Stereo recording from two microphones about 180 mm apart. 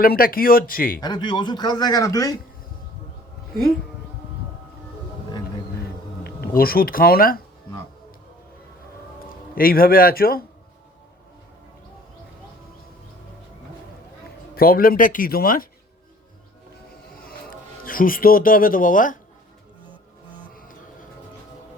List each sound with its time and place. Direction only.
0.0 s speech: 55° left (ahead or behind)
1.0 s speech: 25° left (ahead or behind)
6.2 s speech: 55° left (ahead or behind)
9.6 s speech: 55° left (ahead or behind)
14.5 s speech: 55° left (ahead or behind)
17.2 s music: 55° left (ahead or behind)
20.5 s music: 50° left (ahead or behind)